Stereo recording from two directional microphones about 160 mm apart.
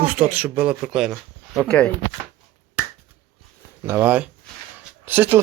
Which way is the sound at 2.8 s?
10° right (ahead or behind).